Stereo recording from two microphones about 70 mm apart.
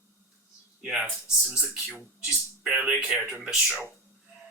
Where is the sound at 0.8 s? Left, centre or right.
Centre.